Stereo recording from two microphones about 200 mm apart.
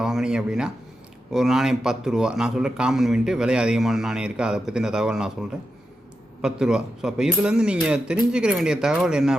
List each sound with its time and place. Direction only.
0.0 s a man's voice: 5° right (ahead or behind)